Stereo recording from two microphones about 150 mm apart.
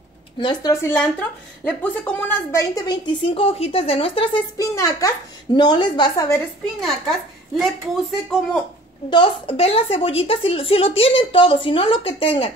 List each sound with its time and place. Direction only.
0.4 s a woman's voice: 30° left (ahead or behind)
1.6 s a woman's voice: 5° left (ahead or behind); by 3.0 s 25° left (ahead or behind)
3.2 s speech: 40° left (ahead or behind)
4.6 s a woman's voice: 20° left (ahead or behind)
6.6 s a woman's voice: centre (ahead or behind)
9.1 s speech: 35° left (ahead or behind)